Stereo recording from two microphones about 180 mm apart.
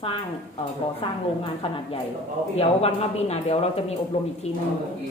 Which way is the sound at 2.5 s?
35° left (ahead or behind).